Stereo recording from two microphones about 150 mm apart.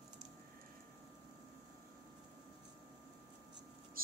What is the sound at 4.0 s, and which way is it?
Mouse, 75° right (ahead or behind).